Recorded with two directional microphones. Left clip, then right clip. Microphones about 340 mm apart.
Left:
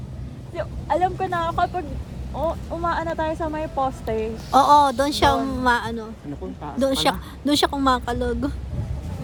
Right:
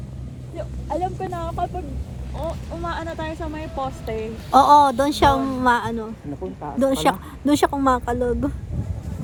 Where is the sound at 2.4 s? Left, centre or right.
Left.